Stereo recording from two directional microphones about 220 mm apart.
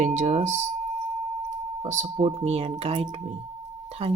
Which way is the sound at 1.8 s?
35° right (ahead or behind).